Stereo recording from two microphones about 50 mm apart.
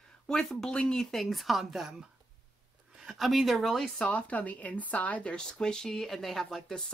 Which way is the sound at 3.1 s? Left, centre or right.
Centre.